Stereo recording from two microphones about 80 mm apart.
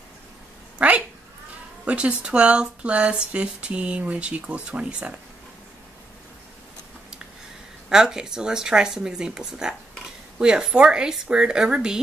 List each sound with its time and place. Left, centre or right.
0.7 s cat: centre
1.9 s speech: centre
7.9 s speech: centre